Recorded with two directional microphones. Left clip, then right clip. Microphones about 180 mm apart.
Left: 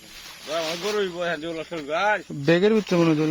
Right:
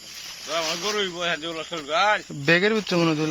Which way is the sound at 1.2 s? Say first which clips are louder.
Right 1 dB; 45° left (ahead or behind).